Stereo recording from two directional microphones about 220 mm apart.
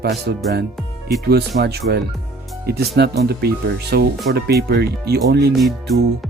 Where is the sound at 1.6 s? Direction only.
45° right (ahead or behind).